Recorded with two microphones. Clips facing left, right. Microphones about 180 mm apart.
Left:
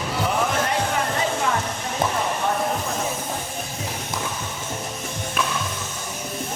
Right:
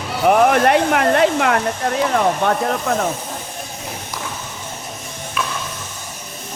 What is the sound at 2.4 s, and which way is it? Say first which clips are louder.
Speech: right 5 dB; 75° right (ahead or behind).